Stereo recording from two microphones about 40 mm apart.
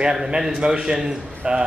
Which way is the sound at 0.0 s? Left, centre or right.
Centre.